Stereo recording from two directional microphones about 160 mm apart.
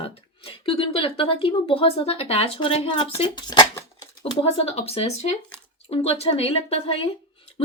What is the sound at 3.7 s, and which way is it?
Shuffling cards, 20° left (ahead or behind).